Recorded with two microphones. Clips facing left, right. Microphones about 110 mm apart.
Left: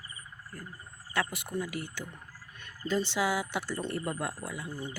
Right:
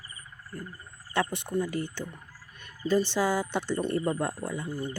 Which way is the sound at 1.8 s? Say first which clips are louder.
Right 5 dB; 10° left (ahead or behind).